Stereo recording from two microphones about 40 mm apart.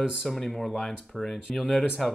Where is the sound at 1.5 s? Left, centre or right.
Left.